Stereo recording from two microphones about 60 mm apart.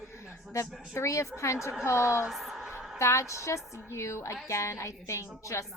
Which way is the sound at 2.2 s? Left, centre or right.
Centre.